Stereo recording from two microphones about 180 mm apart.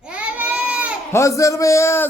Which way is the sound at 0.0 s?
5° right (ahead or behind).